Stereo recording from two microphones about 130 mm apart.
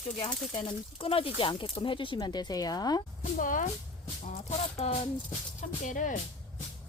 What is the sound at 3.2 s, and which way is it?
Speech, 90° left.